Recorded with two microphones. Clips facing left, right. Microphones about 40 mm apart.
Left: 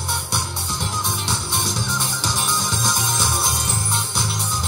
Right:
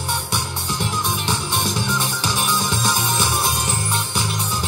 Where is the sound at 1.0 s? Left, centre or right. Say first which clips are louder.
Right 3 dB; right.